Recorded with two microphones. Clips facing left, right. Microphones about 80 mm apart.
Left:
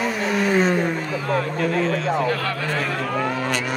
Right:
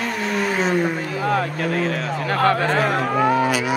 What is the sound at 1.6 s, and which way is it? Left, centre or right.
Speech, right.